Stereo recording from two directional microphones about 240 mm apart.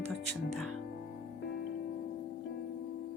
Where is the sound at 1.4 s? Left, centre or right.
Left.